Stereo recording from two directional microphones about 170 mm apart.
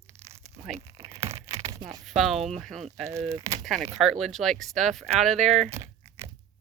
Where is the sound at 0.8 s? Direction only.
20° right (ahead or behind).